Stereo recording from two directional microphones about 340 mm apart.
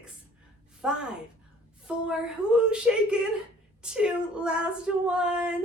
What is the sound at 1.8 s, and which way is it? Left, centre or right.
Female singing, centre.